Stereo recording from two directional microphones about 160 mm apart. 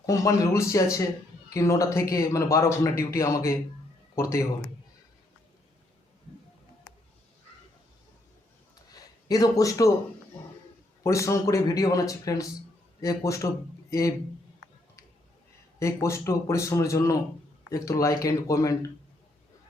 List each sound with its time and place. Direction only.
0.0 s speech: 20° left (ahead or behind)
8.9 s a sound: 25° left (ahead or behind)
11.0 s speech: 20° left (ahead or behind)
15.8 s speech: 20° left (ahead or behind)